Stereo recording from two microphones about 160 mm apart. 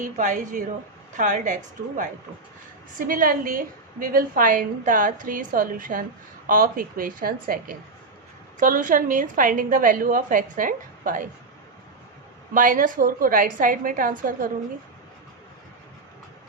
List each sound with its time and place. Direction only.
0.0 s a woman's voice: 50° right (ahead or behind)
3.1 s a woman's voice: 60° right (ahead or behind)
12.5 s a woman's voice: 55° right (ahead or behind)